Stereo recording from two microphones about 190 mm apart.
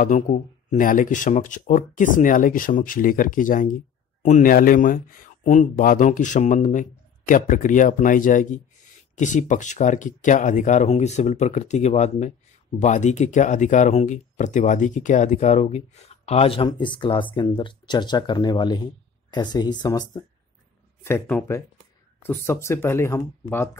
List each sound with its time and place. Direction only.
0.0 s speech: 40° left (ahead or behind); by 20.2 s 20° left (ahead or behind)
21.0 s speech: 10° left (ahead or behind)